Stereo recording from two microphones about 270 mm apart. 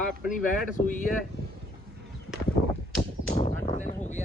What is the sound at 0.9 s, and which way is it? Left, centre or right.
Speech, left.